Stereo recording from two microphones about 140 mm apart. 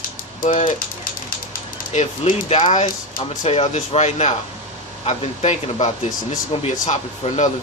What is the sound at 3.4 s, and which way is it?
Speech, 50° left (ahead or behind).